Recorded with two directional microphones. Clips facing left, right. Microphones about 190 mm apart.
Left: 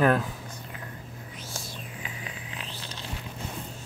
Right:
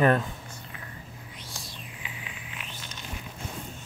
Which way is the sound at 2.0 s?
35° left (ahead or behind).